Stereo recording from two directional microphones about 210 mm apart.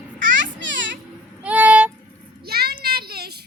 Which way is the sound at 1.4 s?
5° right (ahead or behind).